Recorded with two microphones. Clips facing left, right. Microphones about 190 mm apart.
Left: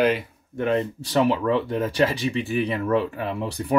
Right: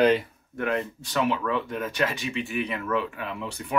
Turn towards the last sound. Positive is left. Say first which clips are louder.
# left 6 dB
turn(degrees=35)  # may be behind; listen again after turning